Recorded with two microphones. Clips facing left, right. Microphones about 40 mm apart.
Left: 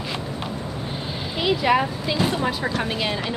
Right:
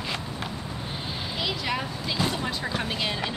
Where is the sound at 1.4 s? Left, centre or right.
Centre.